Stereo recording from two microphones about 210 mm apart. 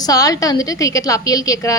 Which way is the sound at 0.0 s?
15° left (ahead or behind).